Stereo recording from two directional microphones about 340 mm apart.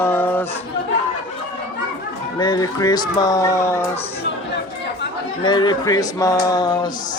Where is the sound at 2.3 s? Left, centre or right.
Centre.